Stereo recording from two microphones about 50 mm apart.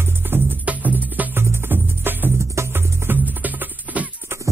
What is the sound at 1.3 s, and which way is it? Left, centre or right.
Music, right.